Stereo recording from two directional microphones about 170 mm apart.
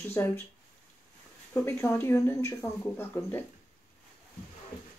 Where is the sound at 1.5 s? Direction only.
15° left (ahead or behind).